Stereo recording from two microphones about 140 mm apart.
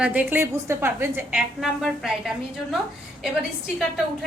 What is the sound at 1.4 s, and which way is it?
A woman's voice, centre (ahead or behind).